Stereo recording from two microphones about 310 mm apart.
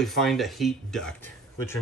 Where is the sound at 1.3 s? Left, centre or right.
Centre.